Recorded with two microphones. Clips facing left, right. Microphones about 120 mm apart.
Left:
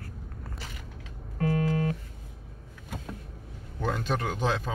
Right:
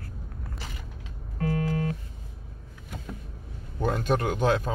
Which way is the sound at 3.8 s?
50° right (ahead or behind).